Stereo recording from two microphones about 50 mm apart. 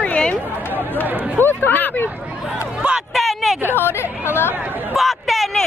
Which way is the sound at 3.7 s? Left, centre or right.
Left.